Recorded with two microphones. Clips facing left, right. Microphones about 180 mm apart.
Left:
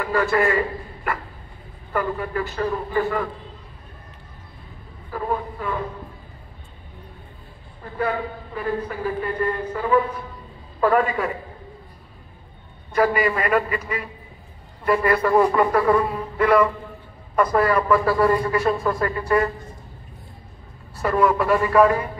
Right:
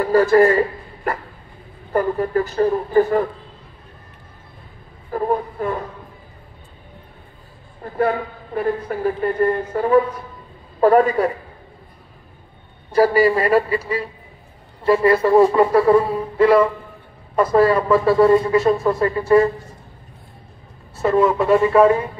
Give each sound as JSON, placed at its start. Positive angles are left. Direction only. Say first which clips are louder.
{"t": 0.0, "sound": "a man's voice", "louder": "right 7 dB", "side_deg": -35}
{"t": 5.1, "sound": "a woman's voice", "louder": "right 5 dB", "side_deg": -40}
{"t": 7.8, "sound": "a woman's voice", "louder": "right 5 dB", "side_deg": -45}
{"t": 12.9, "sound": "a man's voice", "louder": "right 5 dB", "side_deg": -35}
{"t": 20.9, "sound": "speech", "louder": "right 3 dB", "side_deg": -25}